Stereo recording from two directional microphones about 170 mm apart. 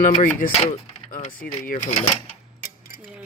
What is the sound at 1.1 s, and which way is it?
Typing, 40° left (ahead or behind).